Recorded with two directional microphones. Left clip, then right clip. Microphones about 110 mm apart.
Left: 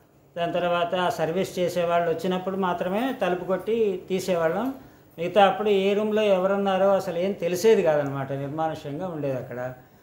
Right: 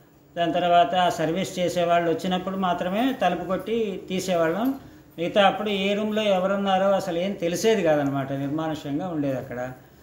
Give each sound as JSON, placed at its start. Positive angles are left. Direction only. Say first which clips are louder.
{"t": 0.4, "sound": "speech", "louder": "right 5 dB", "side_deg": 35}